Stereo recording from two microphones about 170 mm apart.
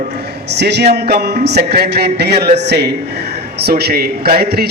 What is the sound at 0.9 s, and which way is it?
A man's voice, 70° right (ahead or behind).